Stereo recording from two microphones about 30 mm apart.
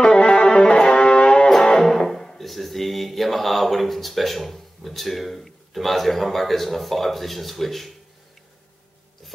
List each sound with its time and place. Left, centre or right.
0.0 s music: left
1.9 s music: centre
2.3 s speech: centre